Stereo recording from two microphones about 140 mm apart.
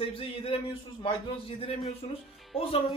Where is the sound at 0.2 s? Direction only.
40° left (ahead or behind).